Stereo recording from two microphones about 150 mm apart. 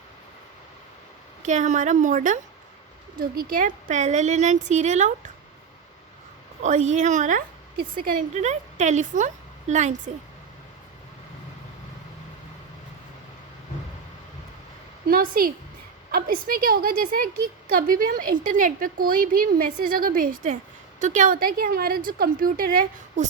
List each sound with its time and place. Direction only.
1.5 s a woman's voice: 55° right (ahead or behind)
3.2 s speech: 75° right (ahead or behind); by 5.1 s 50° right (ahead or behind)
6.6 s a woman's voice: 55° right (ahead or behind)
15.0 s a woman's voice: 75° right (ahead or behind)